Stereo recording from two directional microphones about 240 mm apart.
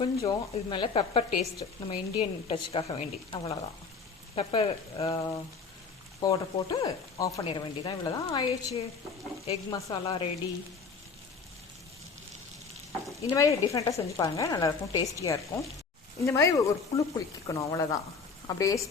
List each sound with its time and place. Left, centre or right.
0.0 s speech: centre
13.3 s speech: centre